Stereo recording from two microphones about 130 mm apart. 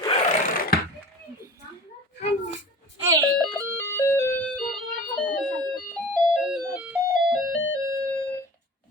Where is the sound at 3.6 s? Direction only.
20° left (ahead or behind).